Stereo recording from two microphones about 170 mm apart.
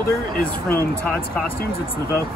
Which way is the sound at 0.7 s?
10° left (ahead or behind).